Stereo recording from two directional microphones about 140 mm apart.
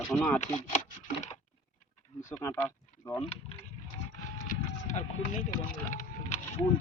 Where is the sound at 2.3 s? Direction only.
20° left (ahead or behind).